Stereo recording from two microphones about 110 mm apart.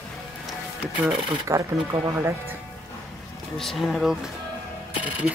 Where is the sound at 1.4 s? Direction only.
30° right (ahead or behind).